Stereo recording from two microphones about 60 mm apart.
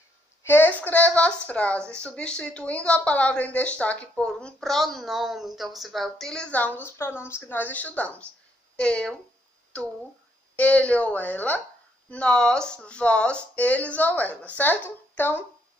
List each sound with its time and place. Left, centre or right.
0.4 s speech: left; by 6.5 s centre
6.5 s a woman's voice: left
7.0 s a woman's voice: left
12.1 s a woman's voice: centre; by 15.4 s left